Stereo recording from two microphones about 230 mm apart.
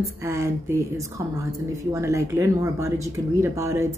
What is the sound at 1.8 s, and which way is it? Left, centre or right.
A woman's voice, centre.